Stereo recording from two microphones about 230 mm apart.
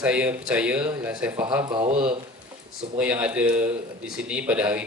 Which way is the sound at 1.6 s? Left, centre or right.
Right.